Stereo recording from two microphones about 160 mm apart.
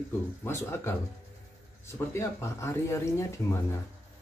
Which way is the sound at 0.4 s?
15° left (ahead or behind).